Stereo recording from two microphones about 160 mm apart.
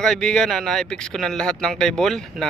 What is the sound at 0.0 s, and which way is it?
Speech, 5° left (ahead or behind).